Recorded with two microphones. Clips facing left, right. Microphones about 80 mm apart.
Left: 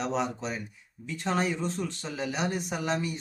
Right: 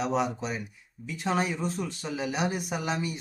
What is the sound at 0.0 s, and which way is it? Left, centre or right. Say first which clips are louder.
Speech: right 2 dB; centre.